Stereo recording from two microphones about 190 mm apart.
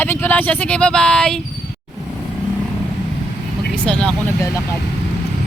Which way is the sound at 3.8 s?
5° left (ahead or behind).